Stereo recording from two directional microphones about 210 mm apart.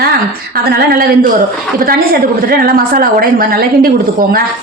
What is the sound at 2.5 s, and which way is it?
A woman's voice, 45° right (ahead or behind).